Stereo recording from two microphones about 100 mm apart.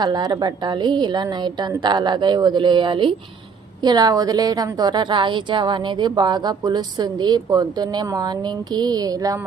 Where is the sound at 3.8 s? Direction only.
40° right (ahead or behind).